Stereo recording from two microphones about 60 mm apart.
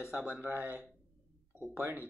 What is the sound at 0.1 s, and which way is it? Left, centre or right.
Speech, right.